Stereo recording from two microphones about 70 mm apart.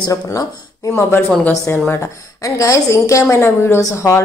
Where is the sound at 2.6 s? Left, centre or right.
Left.